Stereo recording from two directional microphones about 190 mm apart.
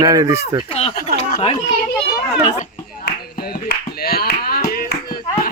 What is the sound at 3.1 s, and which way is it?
Clapping, 55° left (ahead or behind).